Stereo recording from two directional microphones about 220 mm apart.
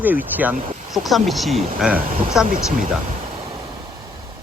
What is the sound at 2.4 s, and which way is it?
Speech, 40° right (ahead or behind).